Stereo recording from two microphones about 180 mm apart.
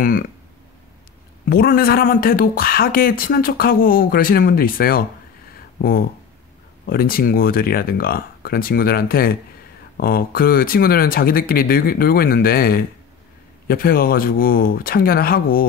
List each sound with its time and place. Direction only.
1.5 s speech: 55° left (ahead or behind)